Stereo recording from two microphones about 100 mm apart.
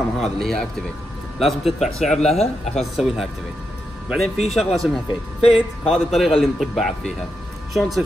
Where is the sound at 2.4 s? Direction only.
90° left.